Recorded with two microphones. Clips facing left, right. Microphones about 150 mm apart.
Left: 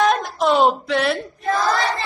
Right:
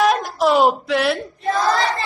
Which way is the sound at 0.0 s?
Centre (ahead or behind).